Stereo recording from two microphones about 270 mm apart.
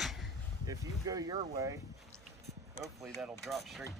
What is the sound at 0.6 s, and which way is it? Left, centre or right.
Speech, centre.